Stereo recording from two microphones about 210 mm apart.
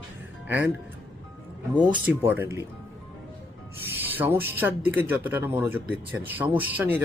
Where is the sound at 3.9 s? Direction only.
10° right (ahead or behind).